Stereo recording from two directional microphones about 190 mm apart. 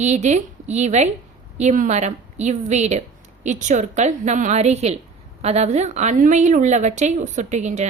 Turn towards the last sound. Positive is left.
turn(degrees=-40)  # may be behind; listen again after turning